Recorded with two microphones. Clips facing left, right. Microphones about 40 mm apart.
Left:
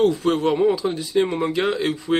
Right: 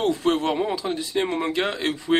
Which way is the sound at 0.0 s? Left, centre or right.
Centre.